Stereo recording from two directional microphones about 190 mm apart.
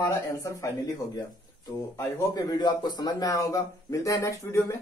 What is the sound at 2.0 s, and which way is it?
A man's voice, 20° left (ahead or behind).